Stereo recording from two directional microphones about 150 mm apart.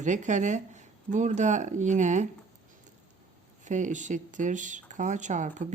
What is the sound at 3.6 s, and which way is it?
Speech, 55° right (ahead or behind).